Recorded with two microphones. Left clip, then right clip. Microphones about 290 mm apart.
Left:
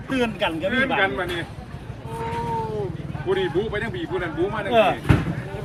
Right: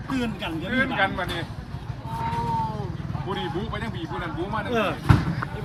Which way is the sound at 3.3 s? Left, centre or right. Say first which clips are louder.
Left 7 dB; centre.